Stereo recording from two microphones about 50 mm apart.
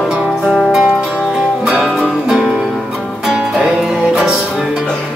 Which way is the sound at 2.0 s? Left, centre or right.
Centre.